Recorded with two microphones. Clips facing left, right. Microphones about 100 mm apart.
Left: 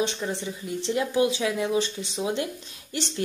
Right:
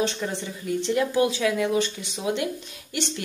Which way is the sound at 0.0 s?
25° left (ahead or behind).